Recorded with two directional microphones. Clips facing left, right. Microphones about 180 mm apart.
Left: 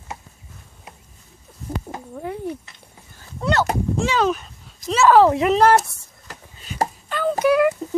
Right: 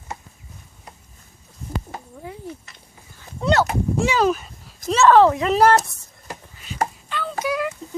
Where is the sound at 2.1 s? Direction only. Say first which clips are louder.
Left 9 dB; 60° left (ahead or behind).